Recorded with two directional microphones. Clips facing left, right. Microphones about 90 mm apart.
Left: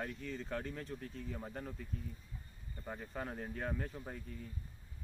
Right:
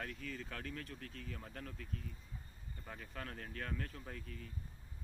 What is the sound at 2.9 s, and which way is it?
Speech, 20° left (ahead or behind).